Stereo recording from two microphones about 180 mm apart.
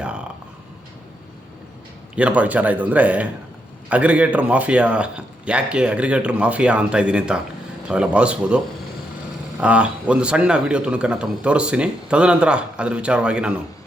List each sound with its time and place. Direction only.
2.1 s a man's voice: 10° right (ahead or behind)